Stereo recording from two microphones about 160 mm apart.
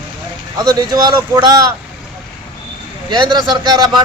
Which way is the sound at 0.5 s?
25° right (ahead or behind).